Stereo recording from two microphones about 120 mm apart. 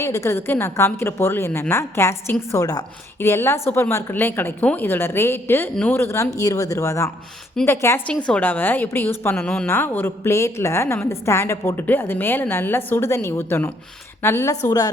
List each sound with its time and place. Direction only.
0.0 s a woman's voice: 25° left (ahead or behind)
8.0 s a woman's voice: 10° left (ahead or behind)
9.4 s a woman's voice: 10° left (ahead or behind); by 14.6 s 25° left (ahead or behind)